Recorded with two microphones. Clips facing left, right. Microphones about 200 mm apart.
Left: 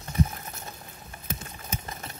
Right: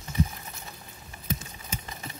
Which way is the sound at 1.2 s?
50° left (ahead or behind).